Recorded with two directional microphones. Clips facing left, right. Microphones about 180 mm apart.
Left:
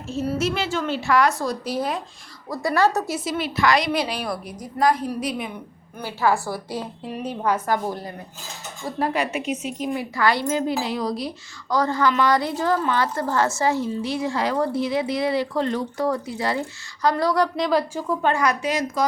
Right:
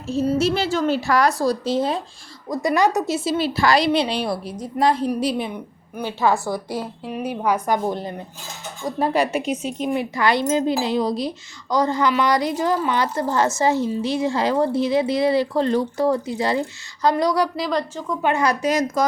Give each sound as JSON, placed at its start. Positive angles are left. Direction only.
{"t": 0.3, "sound": "a woman's voice", "side_deg": -35}
{"t": 3.2, "sound": "speech", "side_deg": -30}
{"t": 6.0, "sound": "speech", "side_deg": -20}
{"t": 7.0, "sound": "a woman's voice", "side_deg": -5}
{"t": 9.0, "sound": "a woman's voice", "side_deg": -35}
{"t": 17.7, "sound": "a woman's voice", "side_deg": 5}
{"t": 18.6, "sound": "a woman's voice", "side_deg": -45}